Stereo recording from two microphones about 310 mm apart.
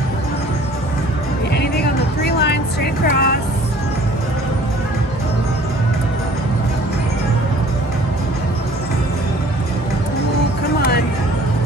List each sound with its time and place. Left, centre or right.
1.5 s music: left